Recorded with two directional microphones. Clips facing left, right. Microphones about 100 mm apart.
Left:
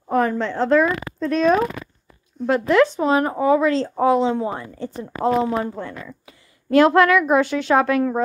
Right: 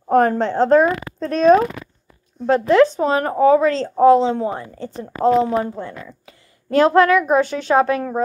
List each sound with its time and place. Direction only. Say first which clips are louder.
0.1 s speech: right 5 dB; 50° right (ahead or behind); by 4.5 s 30° right (ahead or behind)
5.5 s a child's voice: right 2 dB; 25° right (ahead or behind)